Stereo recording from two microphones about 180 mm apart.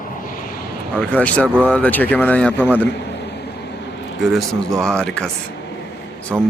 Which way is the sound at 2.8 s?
70° left (ahead or behind).